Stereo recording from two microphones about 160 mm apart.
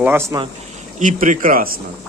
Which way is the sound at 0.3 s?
20° right (ahead or behind).